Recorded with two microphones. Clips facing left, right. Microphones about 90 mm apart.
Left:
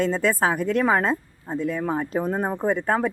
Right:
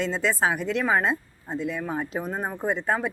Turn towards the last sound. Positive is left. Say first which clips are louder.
# left 3 dB
turn(degrees=50)  # may be behind; listen again after turning